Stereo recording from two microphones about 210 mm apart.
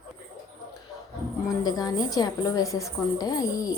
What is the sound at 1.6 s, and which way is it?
A woman's voice, 20° left (ahead or behind).